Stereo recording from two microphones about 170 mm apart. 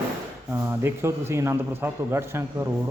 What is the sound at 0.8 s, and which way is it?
Speech, 15° right (ahead or behind).